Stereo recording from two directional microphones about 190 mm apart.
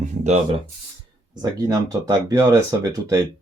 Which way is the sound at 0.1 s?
35° right (ahead or behind).